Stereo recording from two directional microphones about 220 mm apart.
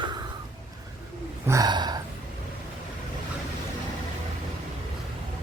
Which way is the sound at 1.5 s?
15° right (ahead or behind).